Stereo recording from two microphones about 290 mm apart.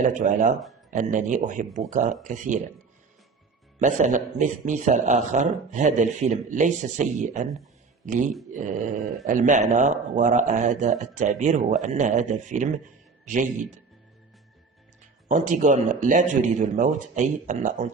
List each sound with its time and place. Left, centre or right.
0.1 s a man's voice: right
3.8 s a man's voice: right
15.3 s a man's voice: right